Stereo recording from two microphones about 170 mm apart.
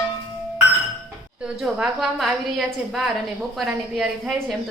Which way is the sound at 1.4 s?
5° right (ahead or behind).